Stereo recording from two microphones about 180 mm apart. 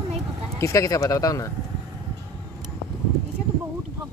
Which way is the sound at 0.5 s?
15° left (ahead or behind).